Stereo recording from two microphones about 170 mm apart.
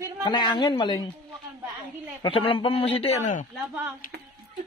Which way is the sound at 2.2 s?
35° left (ahead or behind).